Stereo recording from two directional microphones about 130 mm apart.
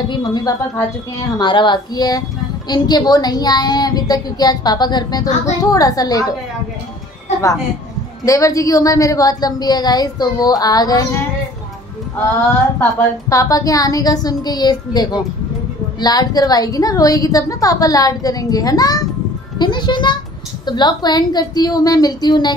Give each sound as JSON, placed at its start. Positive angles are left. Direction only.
{"t": 0.1, "sound": "a woman's voice", "side_deg": 35}
{"t": 8.3, "sound": "a woman's voice", "side_deg": 25}
{"t": 13.3, "sound": "a woman's voice", "side_deg": 25}